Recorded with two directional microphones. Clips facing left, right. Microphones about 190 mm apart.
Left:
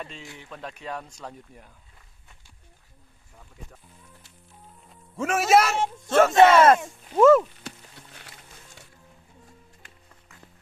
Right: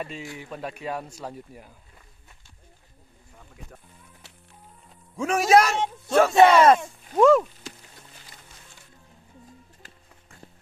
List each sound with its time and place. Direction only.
0.0 s speech: 5° right (ahead or behind)
4.9 s a man's voice: centre (ahead or behind)
6.1 s speech: 5° right (ahead or behind)
10.2 s music: 30° right (ahead or behind)